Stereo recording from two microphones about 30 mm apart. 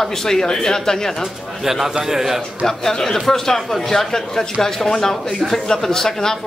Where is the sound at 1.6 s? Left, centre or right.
Centre.